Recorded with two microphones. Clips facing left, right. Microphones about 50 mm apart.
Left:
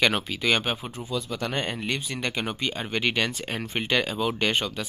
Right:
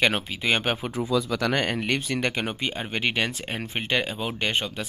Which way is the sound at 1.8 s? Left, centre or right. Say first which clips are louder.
Right 4 dB; right.